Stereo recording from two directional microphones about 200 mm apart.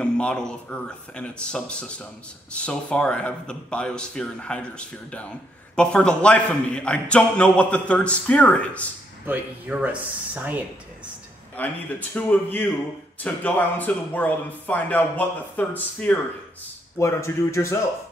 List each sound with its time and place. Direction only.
0.0 s a man's voice: 5° left (ahead or behind)
9.2 s speech: 10° right (ahead or behind)
11.5 s speech: 10° left (ahead or behind)